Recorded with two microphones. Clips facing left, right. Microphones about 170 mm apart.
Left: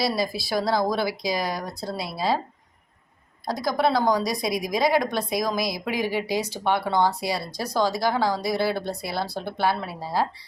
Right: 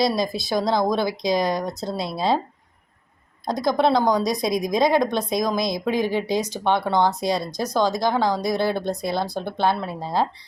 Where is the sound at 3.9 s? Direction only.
20° right (ahead or behind).